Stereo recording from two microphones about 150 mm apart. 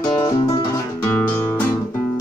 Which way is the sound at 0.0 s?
25° left (ahead or behind).